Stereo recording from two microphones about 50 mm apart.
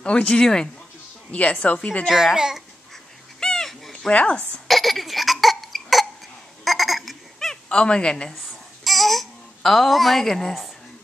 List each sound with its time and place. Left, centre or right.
0.0 s a woman's voice: left
2.3 s a child's voice: centre
3.3 s a sound: centre
4.1 s a woman's voice: left
4.6 s cough: centre
6.6 s a sound: centre
7.3 s a sound: centre
7.8 s a woman's voice: centre
8.8 s babbling: centre